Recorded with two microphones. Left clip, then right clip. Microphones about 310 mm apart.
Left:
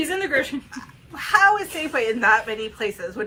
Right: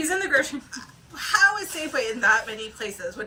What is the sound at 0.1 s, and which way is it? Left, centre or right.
A woman's voice, centre.